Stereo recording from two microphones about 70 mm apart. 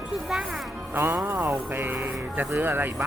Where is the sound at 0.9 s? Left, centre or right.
Right.